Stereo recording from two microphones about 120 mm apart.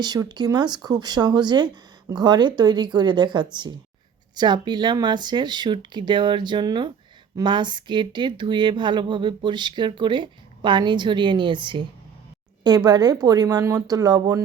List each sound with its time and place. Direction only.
0.0 s speech: 35° right (ahead or behind)